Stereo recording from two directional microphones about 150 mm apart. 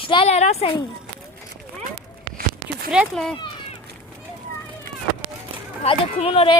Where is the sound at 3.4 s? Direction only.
30° left (ahead or behind).